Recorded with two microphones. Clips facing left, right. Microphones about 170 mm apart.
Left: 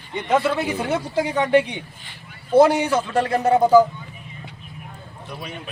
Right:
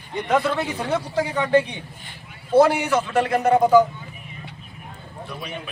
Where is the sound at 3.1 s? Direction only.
35° left (ahead or behind).